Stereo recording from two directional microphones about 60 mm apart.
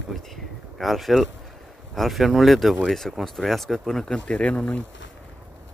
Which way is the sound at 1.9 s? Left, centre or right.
Centre.